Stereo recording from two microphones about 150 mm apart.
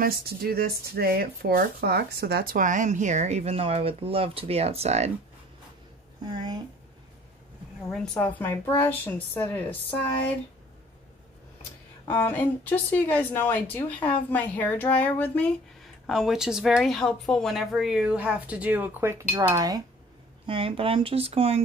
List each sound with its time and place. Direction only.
0.0 s speech: 90° right; by 5.1 s 45° right (ahead or behind)
6.2 s a sound: 30° right (ahead or behind)
7.9 s speech: 5° left (ahead or behind)
12.1 s speech: 15° left (ahead or behind)
16.1 s speech: centre (ahead or behind); by 19.8 s 25° right (ahead or behind)
20.4 s speech: 35° right (ahead or behind)